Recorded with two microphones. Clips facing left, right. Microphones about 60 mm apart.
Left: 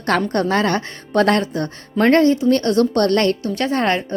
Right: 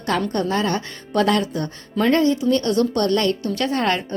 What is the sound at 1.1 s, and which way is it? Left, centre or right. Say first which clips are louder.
A woman's voice: left 3 dB; left.